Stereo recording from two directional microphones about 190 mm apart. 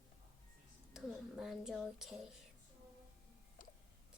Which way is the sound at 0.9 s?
Centre (ahead or behind).